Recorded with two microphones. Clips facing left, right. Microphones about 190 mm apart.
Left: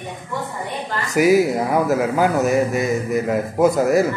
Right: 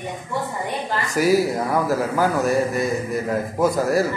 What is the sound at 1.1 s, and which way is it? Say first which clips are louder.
Speech: left 4 dB; 15° left (ahead or behind).